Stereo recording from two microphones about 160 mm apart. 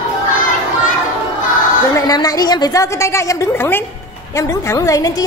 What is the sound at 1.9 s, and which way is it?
A woman's voice, 25° left (ahead or behind).